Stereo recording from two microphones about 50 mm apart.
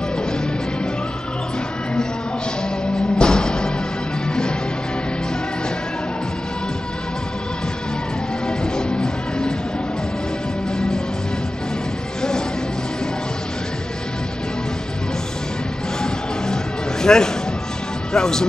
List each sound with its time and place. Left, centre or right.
3.2 s music: centre
8.5 s music: centre
12.2 s music: centre
17.0 s speech: centre
18.1 s music: centre